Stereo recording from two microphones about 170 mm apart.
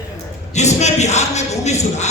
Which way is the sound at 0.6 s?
40° left (ahead or behind).